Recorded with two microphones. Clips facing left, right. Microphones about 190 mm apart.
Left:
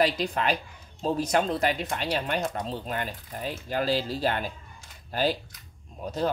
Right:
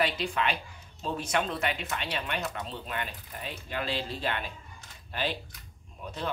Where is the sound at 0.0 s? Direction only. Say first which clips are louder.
Left 4 dB; 40° left (ahead or behind).